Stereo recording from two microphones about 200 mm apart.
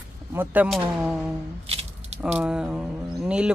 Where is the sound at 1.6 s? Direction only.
30° right (ahead or behind).